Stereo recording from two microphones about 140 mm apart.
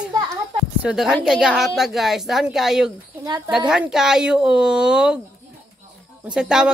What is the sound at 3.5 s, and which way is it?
A woman's voice, 5° right (ahead or behind).